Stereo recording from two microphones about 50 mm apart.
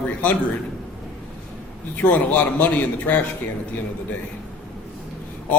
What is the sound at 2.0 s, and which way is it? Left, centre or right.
Speech, left.